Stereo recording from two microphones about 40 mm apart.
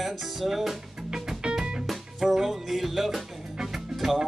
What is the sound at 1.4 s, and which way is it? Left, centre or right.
Music, right.